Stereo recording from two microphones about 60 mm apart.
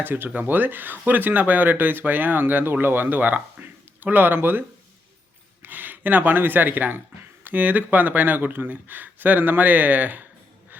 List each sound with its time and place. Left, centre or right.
0.0 s speech: right
5.6 s speech: right